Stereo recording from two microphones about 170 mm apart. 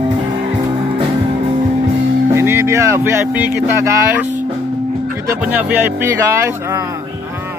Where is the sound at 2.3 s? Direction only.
15° right (ahead or behind).